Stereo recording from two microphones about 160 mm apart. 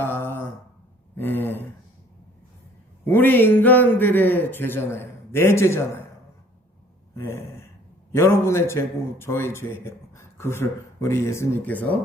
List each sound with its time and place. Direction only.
0.0 s a sound: 15° left (ahead or behind)
1.1 s a man's voice: 10° left (ahead or behind)
3.0 s a man's voice: 15° left (ahead or behind)
7.2 s a man's voice: 15° left (ahead or behind)